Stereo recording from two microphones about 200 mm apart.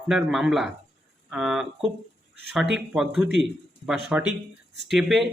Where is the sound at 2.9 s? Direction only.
5° right (ahead or behind).